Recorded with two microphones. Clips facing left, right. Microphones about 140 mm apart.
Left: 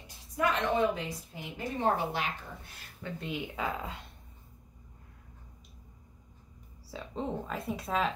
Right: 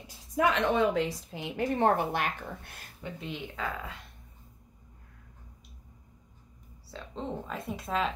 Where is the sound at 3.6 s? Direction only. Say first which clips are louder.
Even; 20° left (ahead or behind).